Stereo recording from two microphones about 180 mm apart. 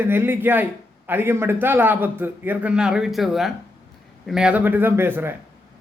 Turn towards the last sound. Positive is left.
turn(degrees=-10)  # may be behind; listen again after turning